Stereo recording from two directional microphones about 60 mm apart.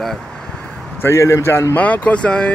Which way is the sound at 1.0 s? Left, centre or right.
Left.